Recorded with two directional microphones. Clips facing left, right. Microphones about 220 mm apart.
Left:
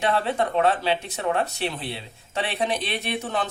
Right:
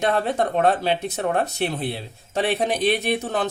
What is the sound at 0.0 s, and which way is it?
A man's voice, 45° right (ahead or behind).